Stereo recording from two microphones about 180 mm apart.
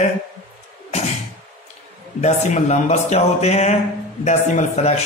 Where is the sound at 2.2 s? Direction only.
40° left (ahead or behind).